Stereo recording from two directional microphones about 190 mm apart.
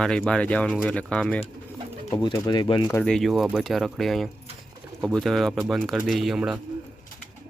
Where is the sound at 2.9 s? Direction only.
10° left (ahead or behind).